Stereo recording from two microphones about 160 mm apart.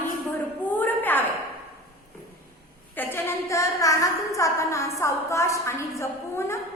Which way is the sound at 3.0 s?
15° left (ahead or behind).